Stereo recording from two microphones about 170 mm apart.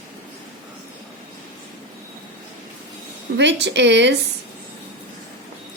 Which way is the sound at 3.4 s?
90° right.